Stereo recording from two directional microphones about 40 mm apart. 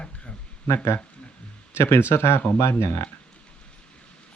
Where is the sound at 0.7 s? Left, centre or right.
Left.